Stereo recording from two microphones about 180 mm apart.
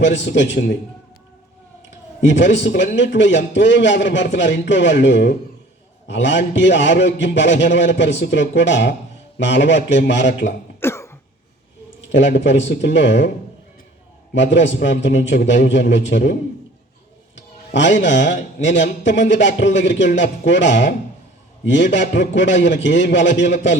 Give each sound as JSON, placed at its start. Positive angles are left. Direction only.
{"t": 0.0, "sound": "a man's voice", "side_deg": 85}
{"t": 2.2, "sound": "a man's voice", "side_deg": 85}
{"t": 10.8, "sound": "cough", "side_deg": 15}
{"t": 12.1, "sound": "a man's voice", "side_deg": 90}
{"t": 14.3, "sound": "a man's voice", "side_deg": 85}
{"t": 17.3, "sound": "a man's voice", "side_deg": 80}